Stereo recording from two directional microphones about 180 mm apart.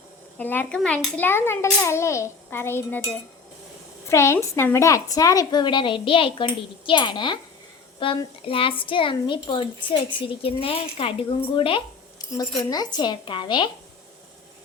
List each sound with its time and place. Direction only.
0.3 s a child's voice: 10° left (ahead or behind); by 13.7 s 25° left (ahead or behind)